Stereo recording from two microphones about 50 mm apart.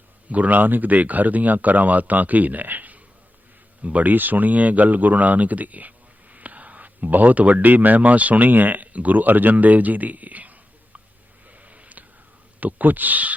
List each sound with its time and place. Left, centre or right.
0.3 s speech: right
11.5 s a sound: right
12.5 s speech: right